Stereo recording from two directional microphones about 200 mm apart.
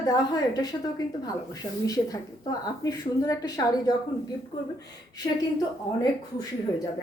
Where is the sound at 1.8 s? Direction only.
20° left (ahead or behind).